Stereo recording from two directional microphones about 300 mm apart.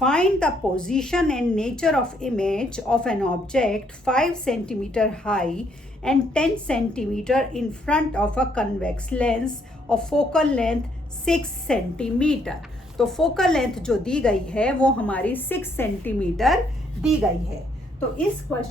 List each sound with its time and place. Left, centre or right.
0.0 s a woman's voice: centre
18.5 s a woman's voice: centre